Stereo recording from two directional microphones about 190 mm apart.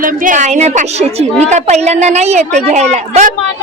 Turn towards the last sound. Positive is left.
turn(degrees=-40)  # may be behind; listen again after turning